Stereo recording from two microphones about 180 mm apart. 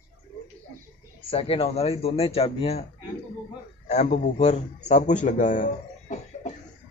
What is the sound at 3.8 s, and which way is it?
A man's voice, 40° left (ahead or behind).